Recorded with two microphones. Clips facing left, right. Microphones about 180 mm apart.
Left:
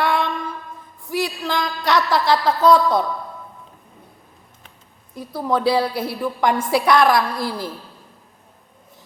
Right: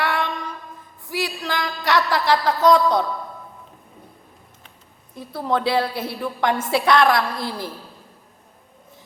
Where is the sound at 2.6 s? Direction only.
20° right (ahead or behind).